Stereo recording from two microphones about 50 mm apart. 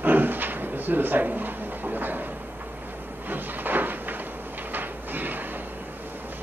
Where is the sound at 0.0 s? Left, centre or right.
Right.